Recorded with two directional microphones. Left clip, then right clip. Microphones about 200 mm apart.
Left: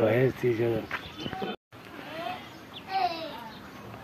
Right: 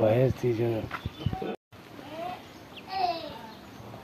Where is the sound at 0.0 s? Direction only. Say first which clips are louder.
Even; 55° right (ahead or behind).